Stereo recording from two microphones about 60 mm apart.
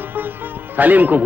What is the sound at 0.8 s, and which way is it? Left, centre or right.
Speech, right.